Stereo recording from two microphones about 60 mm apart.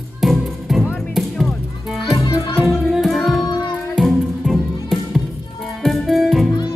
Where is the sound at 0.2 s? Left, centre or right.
Centre.